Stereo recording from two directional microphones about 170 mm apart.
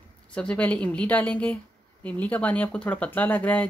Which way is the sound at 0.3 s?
5° left (ahead or behind).